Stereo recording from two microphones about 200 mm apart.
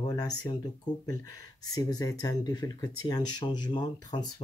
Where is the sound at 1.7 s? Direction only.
20° left (ahead or behind).